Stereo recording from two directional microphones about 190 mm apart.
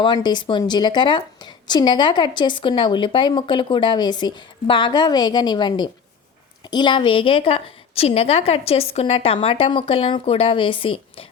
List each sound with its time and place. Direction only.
0.0 s a woman's voice: 25° left (ahead or behind)